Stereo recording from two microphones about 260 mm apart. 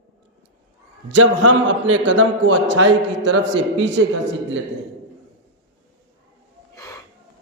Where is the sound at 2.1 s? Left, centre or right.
Right.